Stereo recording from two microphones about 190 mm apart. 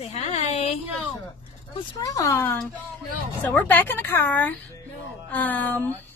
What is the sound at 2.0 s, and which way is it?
A woman's voice, 15° left (ahead or behind).